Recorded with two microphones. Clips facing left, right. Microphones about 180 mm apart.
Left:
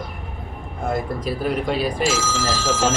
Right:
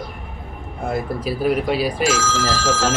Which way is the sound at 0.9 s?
5° right (ahead or behind).